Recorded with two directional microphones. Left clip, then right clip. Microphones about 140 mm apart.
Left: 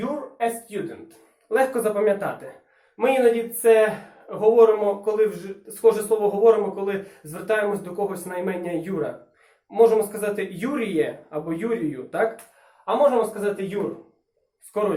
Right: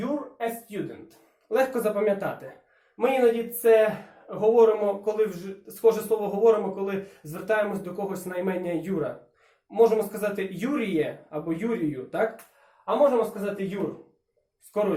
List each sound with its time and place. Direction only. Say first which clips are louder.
0.0 s speech: left 4 dB; centre (ahead or behind)
12.8 s speech: left 2 dB; centre (ahead or behind)
14.7 s speech: left 2 dB; 5° right (ahead or behind)